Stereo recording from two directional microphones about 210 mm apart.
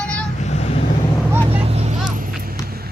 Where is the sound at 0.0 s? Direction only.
5° left (ahead or behind).